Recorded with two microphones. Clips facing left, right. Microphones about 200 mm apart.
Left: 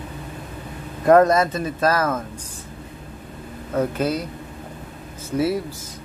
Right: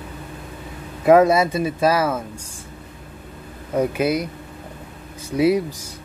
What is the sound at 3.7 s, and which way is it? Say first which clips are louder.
Speech: right 2 dB; 10° right (ahead or behind).